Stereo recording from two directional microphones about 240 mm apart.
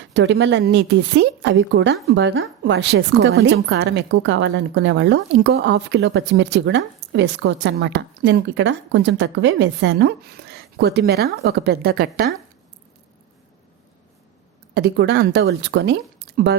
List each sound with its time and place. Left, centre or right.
0.1 s a woman's voice: right
14.8 s a woman's voice: right
16.3 s a sound: right